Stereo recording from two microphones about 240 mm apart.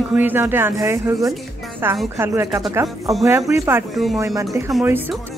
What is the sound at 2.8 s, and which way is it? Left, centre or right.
Speech, centre.